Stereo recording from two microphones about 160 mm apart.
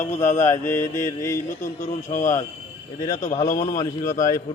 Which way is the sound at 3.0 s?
20° left (ahead or behind).